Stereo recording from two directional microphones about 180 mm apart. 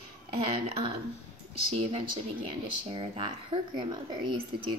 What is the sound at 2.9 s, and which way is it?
Speech, 30° right (ahead or behind).